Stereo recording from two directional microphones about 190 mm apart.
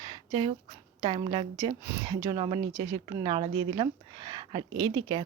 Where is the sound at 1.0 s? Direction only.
25° right (ahead or behind).